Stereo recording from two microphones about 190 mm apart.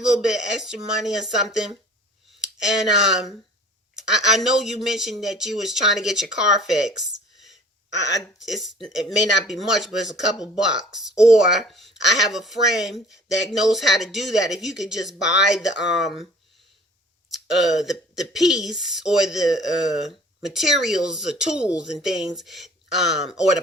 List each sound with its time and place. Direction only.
0.0 s speech: 5° right (ahead or behind)
7.9 s speech: 70° left (ahead or behind)
8.4 s speech: centre (ahead or behind)
15.2 s speech: 65° left (ahead or behind)
16.0 s speech: centre (ahead or behind)
17.3 s speech: centre (ahead or behind)